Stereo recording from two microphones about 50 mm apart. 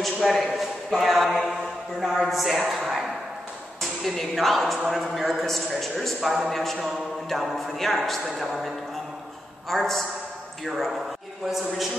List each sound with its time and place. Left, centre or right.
0.0 s a sound: centre
0.6 s mantra: centre
2.7 s a man's voice: centre